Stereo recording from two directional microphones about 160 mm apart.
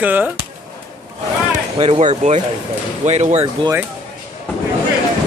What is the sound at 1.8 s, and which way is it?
Speech, 40° right (ahead or behind).